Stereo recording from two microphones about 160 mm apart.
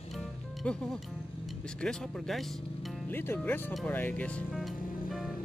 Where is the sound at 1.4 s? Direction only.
5° left (ahead or behind).